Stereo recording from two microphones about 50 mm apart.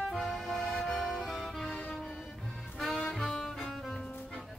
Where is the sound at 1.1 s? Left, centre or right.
Centre.